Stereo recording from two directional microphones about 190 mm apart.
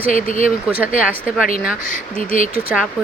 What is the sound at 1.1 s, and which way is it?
Speech, 5° right (ahead or behind).